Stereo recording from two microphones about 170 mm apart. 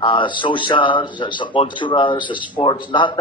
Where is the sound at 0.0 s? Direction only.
30° left (ahead or behind).